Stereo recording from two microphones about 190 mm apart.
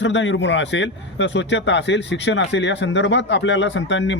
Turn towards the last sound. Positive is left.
turn(degrees=70)  # may be behind; listen again after turning